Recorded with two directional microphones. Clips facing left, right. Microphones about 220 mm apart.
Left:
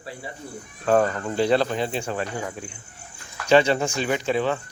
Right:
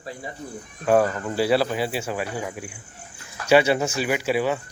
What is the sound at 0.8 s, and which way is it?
Speech, 10° right (ahead or behind).